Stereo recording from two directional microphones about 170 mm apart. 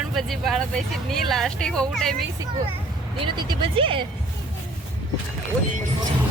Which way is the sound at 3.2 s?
25° right (ahead or behind).